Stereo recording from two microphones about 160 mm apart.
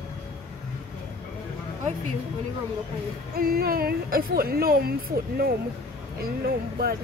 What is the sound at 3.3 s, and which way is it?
A woman's voice, 70° right (ahead or behind).